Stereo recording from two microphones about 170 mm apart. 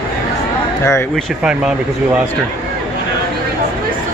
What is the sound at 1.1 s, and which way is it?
Speech, 5° right (ahead or behind).